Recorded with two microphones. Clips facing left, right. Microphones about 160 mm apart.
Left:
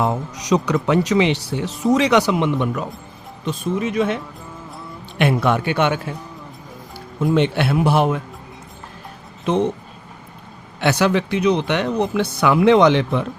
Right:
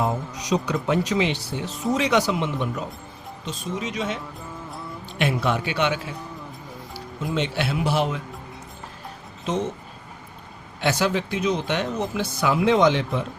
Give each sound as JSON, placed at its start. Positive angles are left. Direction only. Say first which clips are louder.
{"t": 0.0, "sound": "speech", "louder": "left 4 dB", "side_deg": 75}
{"t": 4.4, "sound": "music", "louder": "even", "side_deg": 0}
{"t": 5.1, "sound": "speech", "louder": "left 6 dB", "side_deg": 60}
{"t": 7.3, "sound": "speech", "louder": "left 6 dB", "side_deg": 55}
{"t": 9.5, "sound": "speech", "louder": "left 7 dB", "side_deg": 60}
{"t": 10.8, "sound": "speech", "louder": "left 5 dB", "side_deg": 70}